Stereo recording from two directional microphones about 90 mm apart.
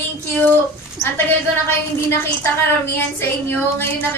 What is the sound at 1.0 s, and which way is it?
A woman's voice, 25° left (ahead or behind).